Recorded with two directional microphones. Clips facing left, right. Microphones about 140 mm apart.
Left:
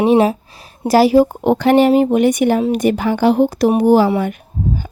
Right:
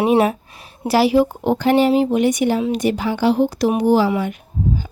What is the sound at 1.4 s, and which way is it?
Speech, 65° left (ahead or behind).